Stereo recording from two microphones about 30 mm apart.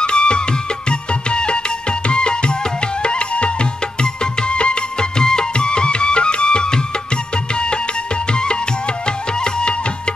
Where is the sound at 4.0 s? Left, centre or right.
Left.